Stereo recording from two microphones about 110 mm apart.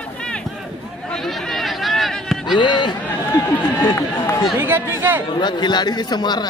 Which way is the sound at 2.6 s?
45° left (ahead or behind).